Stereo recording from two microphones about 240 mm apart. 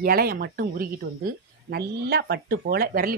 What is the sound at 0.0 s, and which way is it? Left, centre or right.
A woman's voice, right.